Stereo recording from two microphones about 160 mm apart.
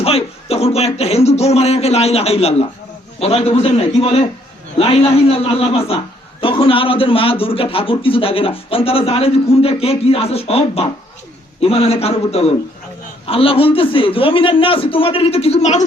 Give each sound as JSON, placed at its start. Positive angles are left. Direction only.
{"t": 0.0, "sound": "a man's voice", "side_deg": 35}